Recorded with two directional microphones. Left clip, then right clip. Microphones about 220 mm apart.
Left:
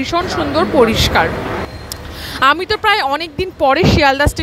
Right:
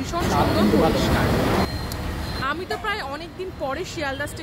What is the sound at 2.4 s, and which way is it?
Speech, 40° left (ahead or behind).